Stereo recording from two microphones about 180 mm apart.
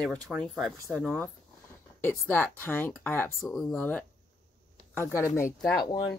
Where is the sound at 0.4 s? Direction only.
Centre (ahead or behind).